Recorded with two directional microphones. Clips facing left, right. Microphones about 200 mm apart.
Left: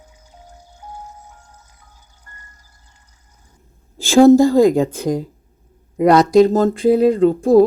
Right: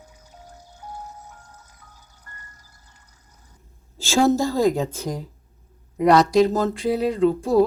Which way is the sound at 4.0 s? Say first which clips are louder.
Left 10 dB; 55° left (ahead or behind).